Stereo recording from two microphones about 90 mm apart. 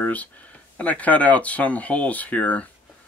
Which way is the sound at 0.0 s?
15° left (ahead or behind).